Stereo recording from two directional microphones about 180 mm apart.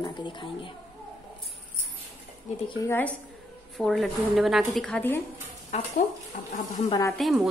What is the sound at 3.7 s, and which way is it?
A woman's voice, centre (ahead or behind).